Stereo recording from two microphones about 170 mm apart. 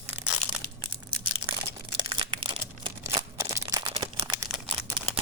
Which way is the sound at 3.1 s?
20° right (ahead or behind).